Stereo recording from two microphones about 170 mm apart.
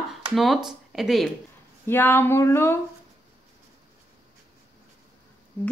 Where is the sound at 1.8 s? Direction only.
15° left (ahead or behind).